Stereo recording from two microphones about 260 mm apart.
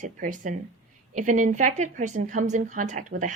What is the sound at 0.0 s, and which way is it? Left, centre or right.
A woman's voice, right.